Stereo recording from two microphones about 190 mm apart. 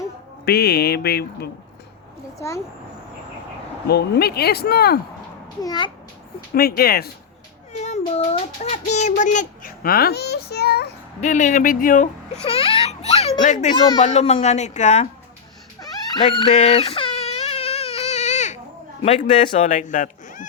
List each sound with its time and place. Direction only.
0.4 s speech: 55° left (ahead or behind)
3.8 s speech: 55° left (ahead or behind)
5.6 s a child's voice: 20° left (ahead or behind)
6.5 s speech: 55° left (ahead or behind)
7.7 s speech: 35° left (ahead or behind); by 10.9 s 60° left (ahead or behind)
11.2 s speech: 40° left (ahead or behind)
16.1 s baby cry: 25° left (ahead or behind)
19.0 s speech: 40° left (ahead or behind)